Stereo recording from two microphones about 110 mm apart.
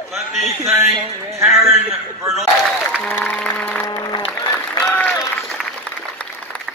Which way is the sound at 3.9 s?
35° left (ahead or behind).